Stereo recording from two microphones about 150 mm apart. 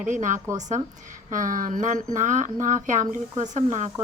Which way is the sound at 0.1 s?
55° right (ahead or behind).